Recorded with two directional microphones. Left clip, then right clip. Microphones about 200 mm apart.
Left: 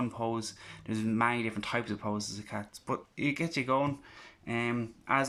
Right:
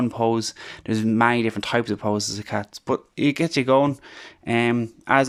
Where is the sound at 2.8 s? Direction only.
35° right (ahead or behind).